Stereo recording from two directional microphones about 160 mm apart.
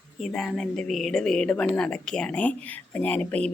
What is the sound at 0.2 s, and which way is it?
A woman's voice, 5° left (ahead or behind).